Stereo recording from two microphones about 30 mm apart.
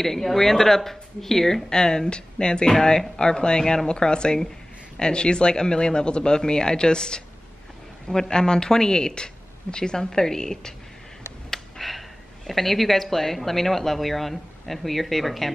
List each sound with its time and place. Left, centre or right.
0.0 s speech: centre
1.7 s speech: left
10.0 s speech: centre
11.5 s a sound: centre
12.4 s speech: centre